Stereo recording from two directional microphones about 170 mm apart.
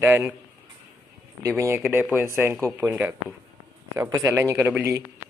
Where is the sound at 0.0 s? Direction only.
10° right (ahead or behind).